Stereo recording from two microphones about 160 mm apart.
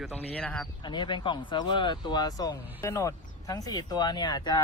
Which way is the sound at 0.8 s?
30° left (ahead or behind).